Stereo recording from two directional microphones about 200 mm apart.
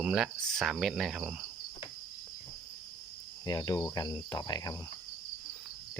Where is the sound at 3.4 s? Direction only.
20° left (ahead or behind).